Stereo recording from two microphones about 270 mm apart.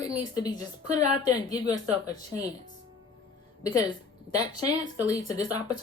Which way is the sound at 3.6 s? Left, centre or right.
Centre.